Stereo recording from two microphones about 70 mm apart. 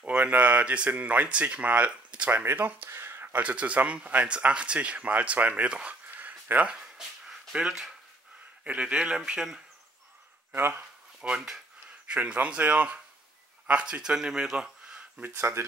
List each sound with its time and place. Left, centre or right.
0.0 s speech: right
6.1 s a sound: right; by 7.9 s centre
8.6 s speech: centre
10.5 s speech: right
11.2 s speech: centre
12.1 s speech: centre
15.3 s speech: right